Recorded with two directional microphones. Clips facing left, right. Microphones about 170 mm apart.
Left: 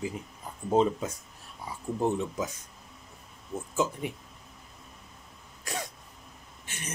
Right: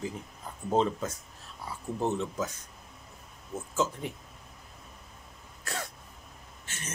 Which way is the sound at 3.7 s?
15° left (ahead or behind).